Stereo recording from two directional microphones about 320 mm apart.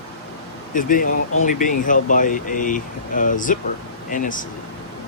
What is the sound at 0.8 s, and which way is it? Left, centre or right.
Speech, left.